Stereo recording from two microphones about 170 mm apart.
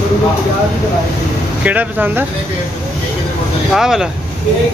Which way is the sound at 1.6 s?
10° right (ahead or behind).